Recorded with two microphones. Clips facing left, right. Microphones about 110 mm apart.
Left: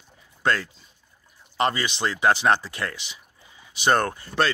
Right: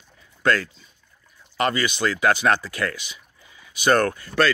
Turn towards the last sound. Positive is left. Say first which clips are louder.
# right 3 dB
turn(degrees=25)  # may be behind; listen again after turning